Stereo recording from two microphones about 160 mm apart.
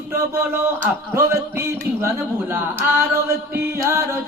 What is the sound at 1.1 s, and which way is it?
Chant, 15° right (ahead or behind).